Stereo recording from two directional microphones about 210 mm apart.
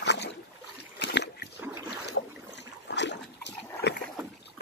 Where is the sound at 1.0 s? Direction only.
50° left (ahead or behind).